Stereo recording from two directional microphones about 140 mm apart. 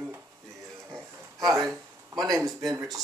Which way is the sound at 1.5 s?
25° right (ahead or behind).